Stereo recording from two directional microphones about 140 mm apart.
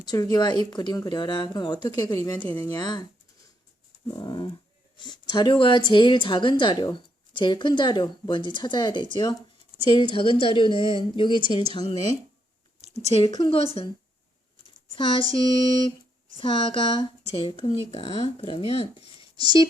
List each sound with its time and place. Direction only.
0.0 s speech: 30° left (ahead or behind)
4.1 s speech: 35° left (ahead or behind)
12.8 s a sound: 50° right (ahead or behind)
13.1 s speech: 45° left (ahead or behind)
14.9 s speech: 35° left (ahead or behind)